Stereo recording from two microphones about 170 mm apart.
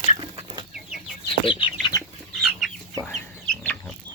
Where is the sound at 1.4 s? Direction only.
30° left (ahead or behind).